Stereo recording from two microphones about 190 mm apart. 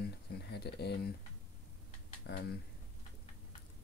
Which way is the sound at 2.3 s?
65° left (ahead or behind).